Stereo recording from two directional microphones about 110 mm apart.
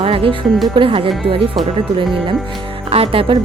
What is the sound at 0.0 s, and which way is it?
Music, 55° right (ahead or behind).